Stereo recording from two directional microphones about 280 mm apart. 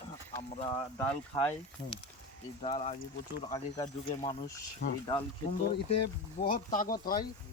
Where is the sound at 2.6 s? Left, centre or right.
Left.